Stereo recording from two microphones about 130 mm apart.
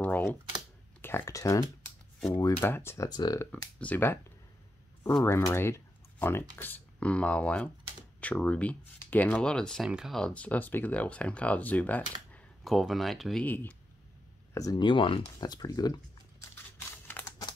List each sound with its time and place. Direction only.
0.0 s typing: 15° left (ahead or behind)
1.0 s speech: 20° left (ahead or behind)
3.1 s speech: 30° left (ahead or behind)
3.8 s speech: 15° left (ahead or behind)
5.2 s speech: 20° left (ahead or behind)
12.6 s speech: centre (ahead or behind)
14.5 s speech: 30° left (ahead or behind)